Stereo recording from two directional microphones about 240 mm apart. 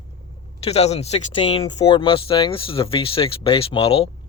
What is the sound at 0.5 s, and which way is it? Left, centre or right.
Speech, left.